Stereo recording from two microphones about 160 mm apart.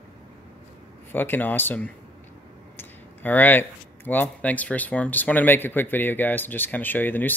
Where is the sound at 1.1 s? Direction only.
10° left (ahead or behind).